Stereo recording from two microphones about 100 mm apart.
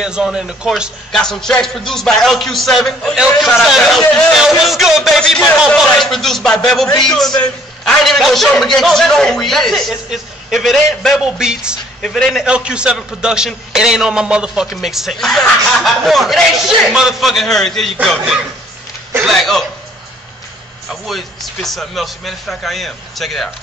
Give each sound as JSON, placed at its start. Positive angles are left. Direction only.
{"t": 0.0, "sound": "speech", "side_deg": -5}
{"t": 1.1, "sound": "a man's voice", "side_deg": 5}
{"t": 12.0, "sound": "a man's voice", "side_deg": 5}
{"t": 12.4, "sound": "a man's voice", "side_deg": -10}
{"t": 20.9, "sound": "a man's voice", "side_deg": 0}